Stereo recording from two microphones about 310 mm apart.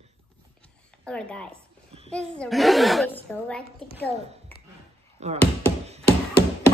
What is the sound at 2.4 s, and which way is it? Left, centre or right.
Speech, centre.